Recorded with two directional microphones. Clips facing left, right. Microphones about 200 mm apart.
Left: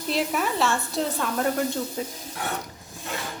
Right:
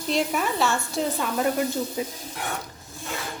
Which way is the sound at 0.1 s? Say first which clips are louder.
Right 1 dB; centre (ahead or behind).